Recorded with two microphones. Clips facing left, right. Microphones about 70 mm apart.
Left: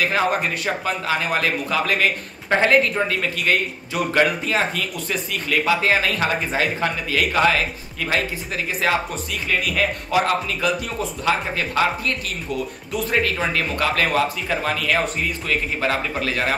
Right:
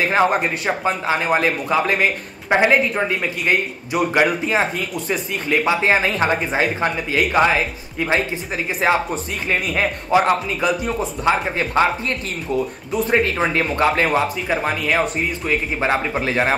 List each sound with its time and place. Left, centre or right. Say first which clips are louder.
0.0 s speech: right 3 dB; right